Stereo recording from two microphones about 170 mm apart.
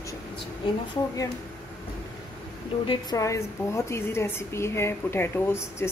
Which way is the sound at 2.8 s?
25° left (ahead or behind).